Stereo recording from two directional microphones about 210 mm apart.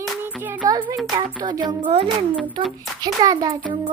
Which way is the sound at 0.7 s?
20° right (ahead or behind).